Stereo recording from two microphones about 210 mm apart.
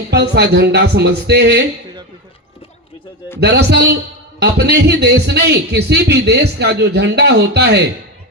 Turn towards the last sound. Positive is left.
turn(degrees=-50)  # may be behind; listen again after turning